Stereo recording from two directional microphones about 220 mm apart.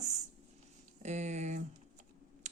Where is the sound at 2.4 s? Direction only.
30° right (ahead or behind).